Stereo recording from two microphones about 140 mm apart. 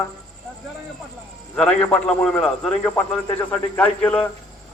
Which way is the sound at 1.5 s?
10° left (ahead or behind).